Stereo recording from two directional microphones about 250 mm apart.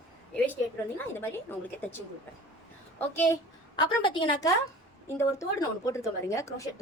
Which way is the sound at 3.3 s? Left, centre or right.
Centre.